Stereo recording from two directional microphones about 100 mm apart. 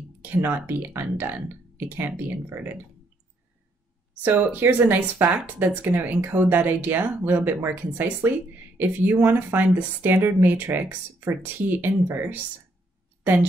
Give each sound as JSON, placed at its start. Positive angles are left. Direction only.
{"t": 0.2, "sound": "speech", "side_deg": -20}
{"t": 4.1, "sound": "a woman's voice", "side_deg": -20}